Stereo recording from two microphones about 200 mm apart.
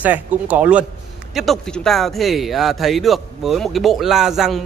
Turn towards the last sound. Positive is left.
turn(degrees=0)  # may be behind; listen again after turning